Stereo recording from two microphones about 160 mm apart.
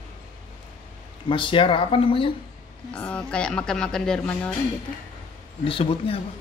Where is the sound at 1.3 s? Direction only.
30° left (ahead or behind).